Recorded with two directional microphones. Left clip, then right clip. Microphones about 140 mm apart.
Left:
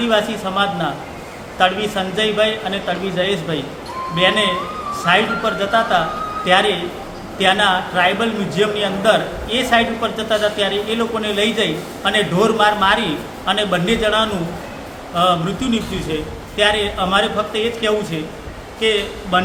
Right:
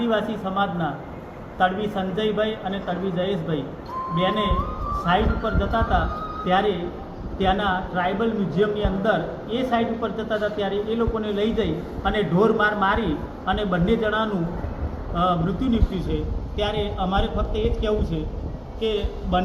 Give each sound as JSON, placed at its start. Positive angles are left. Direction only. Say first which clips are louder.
{"t": 0.0, "sound": "a man's voice", "louder": "left 6 dB", "side_deg": 15}
{"t": 4.1, "sound": "a man's voice", "louder": "left 8 dB", "side_deg": 15}
{"t": 6.4, "sound": "a man's voice", "louder": "left 7 dB", "side_deg": 60}
{"t": 18.8, "sound": "a man's voice", "louder": "left 8 dB", "side_deg": 5}